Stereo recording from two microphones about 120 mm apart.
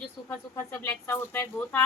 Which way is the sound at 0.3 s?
20° left (ahead or behind).